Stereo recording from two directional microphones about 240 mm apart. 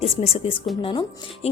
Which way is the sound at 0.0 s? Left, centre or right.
Left.